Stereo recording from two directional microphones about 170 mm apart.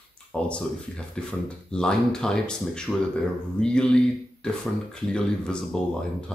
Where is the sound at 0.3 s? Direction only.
5° left (ahead or behind).